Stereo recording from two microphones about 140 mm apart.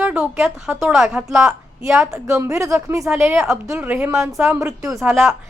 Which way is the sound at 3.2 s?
5° right (ahead or behind).